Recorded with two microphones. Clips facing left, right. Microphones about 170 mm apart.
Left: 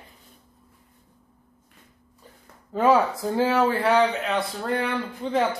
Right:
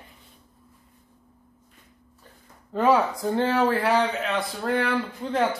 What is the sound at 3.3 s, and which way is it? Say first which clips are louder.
A man's voice: even; centre (ahead or behind).